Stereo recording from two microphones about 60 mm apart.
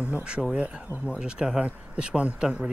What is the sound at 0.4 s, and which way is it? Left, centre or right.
Speech, centre.